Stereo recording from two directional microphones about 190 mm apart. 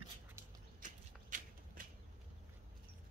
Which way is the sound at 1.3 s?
45° right (ahead or behind).